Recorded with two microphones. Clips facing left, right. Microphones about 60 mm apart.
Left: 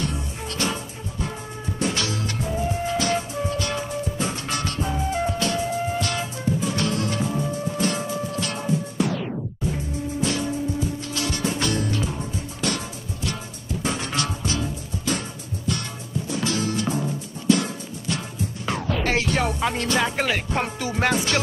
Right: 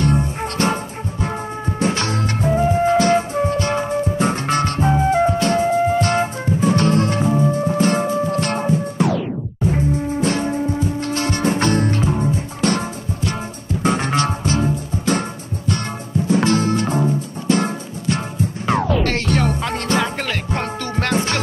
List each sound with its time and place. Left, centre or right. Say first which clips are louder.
0.0 s music: right 10 dB; right
1.8 s music: right 5 dB; right
10.2 s music: right 4 dB; right
16.3 s music: right 9 dB; right
19.0 s music: right 3 dB; centre
21.1 s music: right 7 dB; right